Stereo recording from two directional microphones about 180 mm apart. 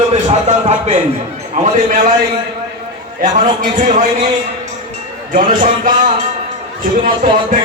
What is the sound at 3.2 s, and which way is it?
A man's voice, 45° right (ahead or behind).